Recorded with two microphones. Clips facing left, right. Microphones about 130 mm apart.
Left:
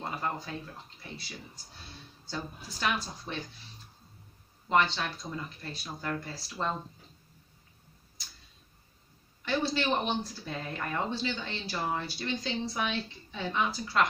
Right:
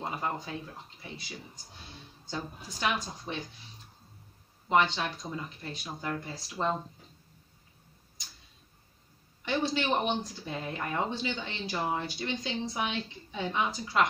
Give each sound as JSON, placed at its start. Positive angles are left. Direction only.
{"t": 0.0, "sound": "speech", "side_deg": -10}
{"t": 4.6, "sound": "speech", "side_deg": -15}
{"t": 9.4, "sound": "speech", "side_deg": -15}